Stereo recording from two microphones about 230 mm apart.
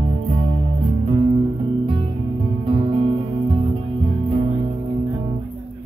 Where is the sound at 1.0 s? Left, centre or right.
Right.